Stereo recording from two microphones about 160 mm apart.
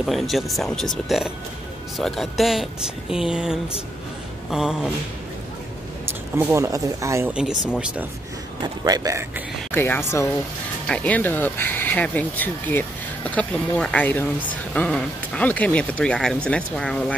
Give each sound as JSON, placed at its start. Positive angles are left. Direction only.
{"t": 0.0, "sound": "speech", "side_deg": 0}
{"t": 6.0, "sound": "speech", "side_deg": -15}
{"t": 7.3, "sound": "speech", "side_deg": -5}
{"t": 8.8, "sound": "a man's voice", "side_deg": -20}
{"t": 9.7, "sound": "speech", "side_deg": 15}